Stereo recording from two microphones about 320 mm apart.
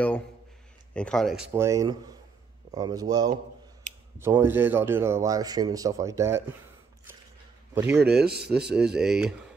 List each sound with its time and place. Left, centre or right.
0.9 s speech: centre
7.7 s a man's voice: centre
8.2 s speech: right
8.7 s speech: centre